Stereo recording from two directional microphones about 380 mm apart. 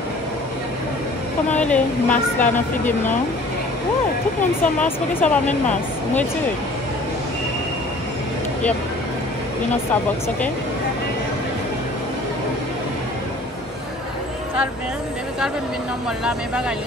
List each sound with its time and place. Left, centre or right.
1.6 s speech: centre
2.4 s speech: centre
4.8 s speech: centre